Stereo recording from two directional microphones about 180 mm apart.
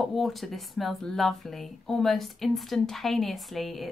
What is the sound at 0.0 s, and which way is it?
Speech, centre (ahead or behind).